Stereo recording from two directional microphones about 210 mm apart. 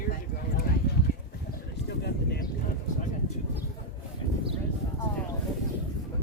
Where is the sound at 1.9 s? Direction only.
50° left (ahead or behind).